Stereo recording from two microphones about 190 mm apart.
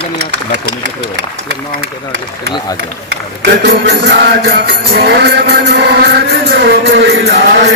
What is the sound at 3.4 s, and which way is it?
Music, 60° right (ahead or behind).